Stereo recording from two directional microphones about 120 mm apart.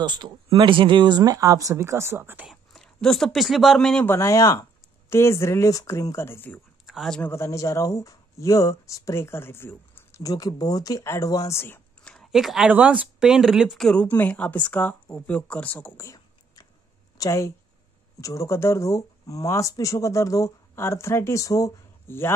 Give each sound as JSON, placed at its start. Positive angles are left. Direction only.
{"t": 0.0, "sound": "speech", "side_deg": -40}
{"t": 2.4, "sound": "speech", "side_deg": 0}
{"t": 4.0, "sound": "speech", "side_deg": 25}
{"t": 6.9, "sound": "a sound", "side_deg": 0}
{"t": 7.2, "sound": "speech", "side_deg": 20}
{"t": 12.1, "sound": "a sound", "side_deg": 0}
{"t": 12.7, "sound": "speech", "side_deg": -10}
{"t": 16.0, "sound": "a sound", "side_deg": 25}
{"t": 17.2, "sound": "speech", "side_deg": 25}